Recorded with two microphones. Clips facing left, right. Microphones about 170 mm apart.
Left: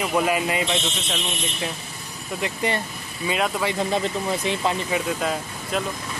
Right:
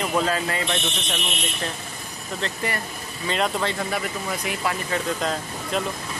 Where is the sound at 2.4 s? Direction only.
20° left (ahead or behind).